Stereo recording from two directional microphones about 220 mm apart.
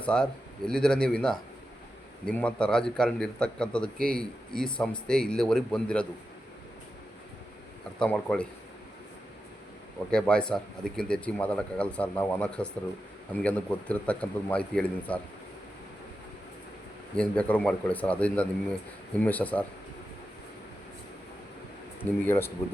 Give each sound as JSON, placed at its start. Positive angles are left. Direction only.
{"t": 0.0, "sound": "speech", "side_deg": 5}
{"t": 3.9, "sound": "speech", "side_deg": -40}
{"t": 4.2, "sound": "speech", "side_deg": 5}
{"t": 7.9, "sound": "speech", "side_deg": 5}
{"t": 10.1, "sound": "speech", "side_deg": 5}
{"t": 17.2, "sound": "speech", "side_deg": 5}
{"t": 22.3, "sound": "speech", "side_deg": 10}